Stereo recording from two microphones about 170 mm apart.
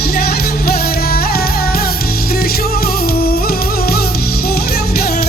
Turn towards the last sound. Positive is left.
turn(degrees=65)  # may be behind; listen again after turning